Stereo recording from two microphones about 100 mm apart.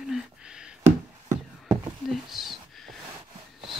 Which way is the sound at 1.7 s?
Centre (ahead or behind).